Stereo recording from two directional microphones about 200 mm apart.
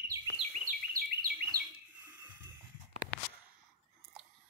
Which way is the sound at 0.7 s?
45° right (ahead or behind).